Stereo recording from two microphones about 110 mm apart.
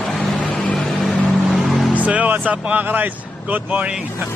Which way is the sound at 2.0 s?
15° right (ahead or behind).